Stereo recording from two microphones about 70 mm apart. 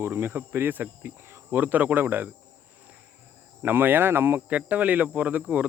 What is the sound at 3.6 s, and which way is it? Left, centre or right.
Speech, right.